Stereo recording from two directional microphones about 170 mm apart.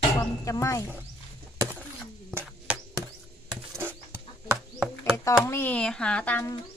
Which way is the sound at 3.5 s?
10° right (ahead or behind).